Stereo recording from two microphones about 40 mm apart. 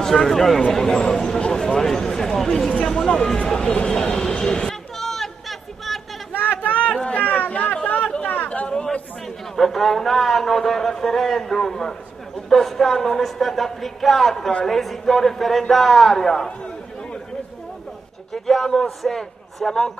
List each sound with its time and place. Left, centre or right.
0.0 s a man's voice: centre; by 3.9 s left
3.9 s a man's voice: centre
4.9 s a sound: centre
6.6 s a sound: left
7.2 s chatter: left
9.6 s a man's voice: centre
18.3 s a man's voice: centre